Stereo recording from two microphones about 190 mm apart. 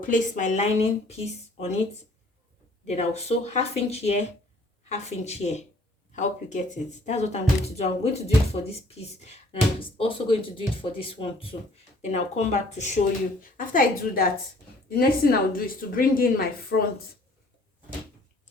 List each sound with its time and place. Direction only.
0.0 s speech: 45° left (ahead or behind)
2.8 s speech: 35° left (ahead or behind)